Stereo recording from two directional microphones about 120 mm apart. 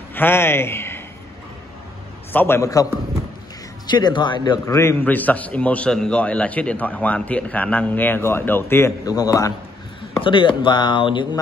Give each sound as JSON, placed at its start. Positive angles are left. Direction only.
{"t": 0.1, "sound": "a man's voice", "side_deg": 20}
{"t": 2.3, "sound": "a man's voice", "side_deg": 20}
{"t": 4.6, "sound": "a man's voice", "side_deg": 25}
{"t": 10.2, "sound": "speech", "side_deg": 45}